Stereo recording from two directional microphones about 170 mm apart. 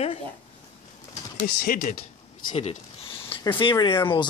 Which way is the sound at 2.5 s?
35° left (ahead or behind).